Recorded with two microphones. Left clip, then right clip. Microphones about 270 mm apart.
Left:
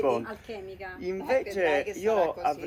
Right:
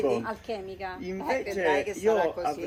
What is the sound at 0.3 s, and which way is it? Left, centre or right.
Speech, centre.